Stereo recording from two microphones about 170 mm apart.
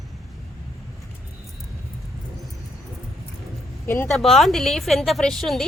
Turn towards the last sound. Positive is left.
turn(degrees=0)  # may be behind; listen again after turning